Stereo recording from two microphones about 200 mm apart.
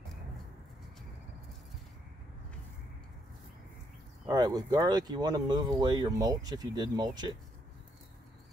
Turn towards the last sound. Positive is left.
turn(degrees=-20)  # may be behind; listen again after turning